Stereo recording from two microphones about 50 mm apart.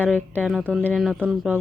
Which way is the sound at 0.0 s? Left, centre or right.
Left.